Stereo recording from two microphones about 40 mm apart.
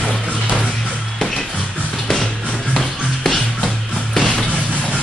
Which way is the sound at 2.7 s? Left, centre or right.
Centre.